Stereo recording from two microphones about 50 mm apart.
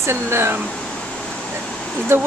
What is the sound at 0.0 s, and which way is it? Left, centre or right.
Speech, right.